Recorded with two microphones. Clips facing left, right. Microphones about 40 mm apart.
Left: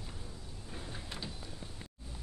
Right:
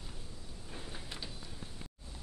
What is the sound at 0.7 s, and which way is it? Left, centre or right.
Sliding door, centre.